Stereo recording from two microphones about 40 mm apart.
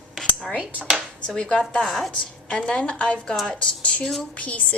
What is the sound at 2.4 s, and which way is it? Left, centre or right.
A woman's voice, left.